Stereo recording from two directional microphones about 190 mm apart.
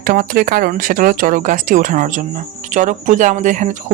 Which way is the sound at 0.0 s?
45° right (ahead or behind).